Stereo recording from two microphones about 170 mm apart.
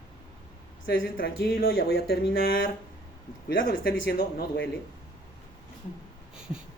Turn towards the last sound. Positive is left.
turn(degrees=-5)  # may be behind; listen again after turning